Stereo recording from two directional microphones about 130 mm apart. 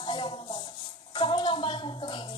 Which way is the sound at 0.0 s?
40° left (ahead or behind).